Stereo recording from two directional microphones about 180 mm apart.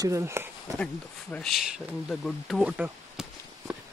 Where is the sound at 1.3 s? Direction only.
Centre (ahead or behind).